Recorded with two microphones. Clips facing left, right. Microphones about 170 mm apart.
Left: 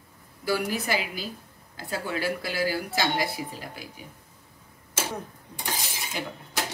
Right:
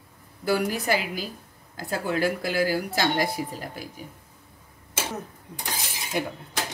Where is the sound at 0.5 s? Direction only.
45° right (ahead or behind).